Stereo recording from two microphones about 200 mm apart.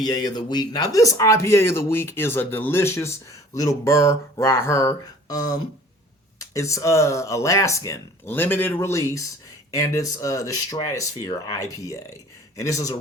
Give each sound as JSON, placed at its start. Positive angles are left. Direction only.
{"t": 0.0, "sound": "speech", "side_deg": 20}